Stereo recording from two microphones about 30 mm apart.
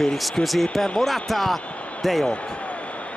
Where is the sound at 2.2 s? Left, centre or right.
Left.